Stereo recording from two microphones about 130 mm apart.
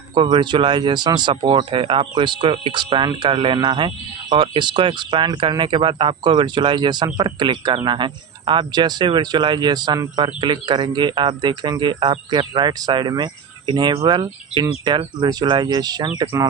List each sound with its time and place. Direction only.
0.1 s speech: 40° right (ahead or behind)